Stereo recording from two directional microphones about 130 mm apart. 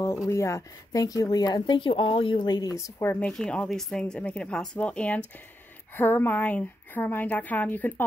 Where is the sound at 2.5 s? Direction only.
30° left (ahead or behind).